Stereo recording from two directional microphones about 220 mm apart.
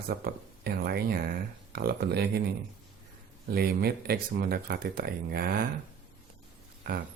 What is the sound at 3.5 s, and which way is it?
Speech, 45° right (ahead or behind).